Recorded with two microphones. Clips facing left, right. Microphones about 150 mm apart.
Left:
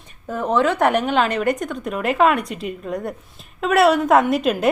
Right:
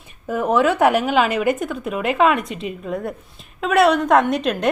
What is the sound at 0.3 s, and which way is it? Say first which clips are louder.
A woman's voice: right 2 dB; 10° right (ahead or behind).